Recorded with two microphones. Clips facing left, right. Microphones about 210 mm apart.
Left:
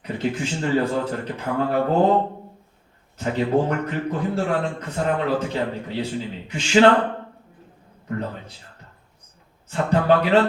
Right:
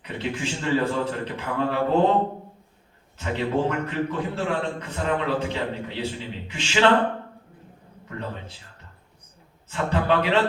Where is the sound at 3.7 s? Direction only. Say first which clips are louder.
Left 1 dB; 40° left (ahead or behind).